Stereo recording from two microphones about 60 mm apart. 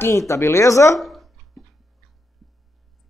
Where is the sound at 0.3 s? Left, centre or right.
Left.